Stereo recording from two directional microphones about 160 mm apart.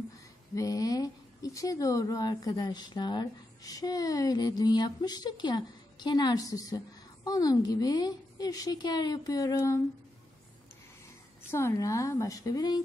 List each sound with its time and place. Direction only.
0.6 s speech: 20° left (ahead or behind)
11.5 s speech: 20° left (ahead or behind)